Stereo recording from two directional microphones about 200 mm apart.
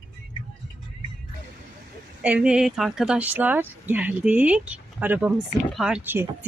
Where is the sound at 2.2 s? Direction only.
5° right (ahead or behind).